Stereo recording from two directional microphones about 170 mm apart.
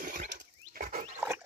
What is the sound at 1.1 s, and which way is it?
Dog, 10° right (ahead or behind).